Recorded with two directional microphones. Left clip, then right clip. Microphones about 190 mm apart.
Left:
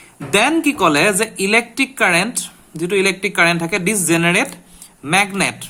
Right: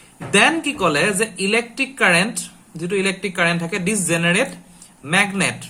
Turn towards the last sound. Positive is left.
turn(degrees=50)  # may be behind; listen again after turning